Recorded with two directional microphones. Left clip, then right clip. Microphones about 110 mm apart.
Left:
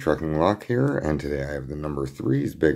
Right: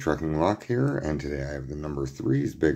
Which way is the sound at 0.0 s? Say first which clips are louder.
Left 3 dB; 15° left (ahead or behind).